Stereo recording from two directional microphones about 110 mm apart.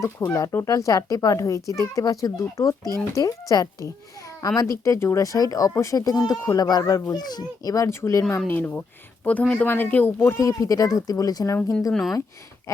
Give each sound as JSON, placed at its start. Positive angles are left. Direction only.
{"t": 0.0, "sound": "a child's voice", "side_deg": 30}
{"t": 8.4, "sound": "speech", "side_deg": 15}
{"t": 11.9, "sound": "speech", "side_deg": 0}